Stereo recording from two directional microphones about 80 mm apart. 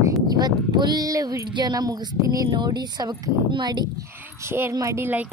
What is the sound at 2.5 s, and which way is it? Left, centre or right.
Speech, right.